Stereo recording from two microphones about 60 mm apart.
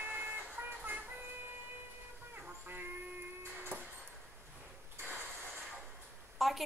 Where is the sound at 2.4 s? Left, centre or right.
Right.